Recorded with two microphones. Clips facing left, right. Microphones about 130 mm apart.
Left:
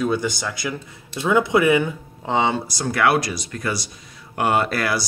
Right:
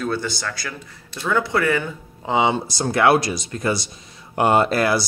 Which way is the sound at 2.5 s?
25° right (ahead or behind).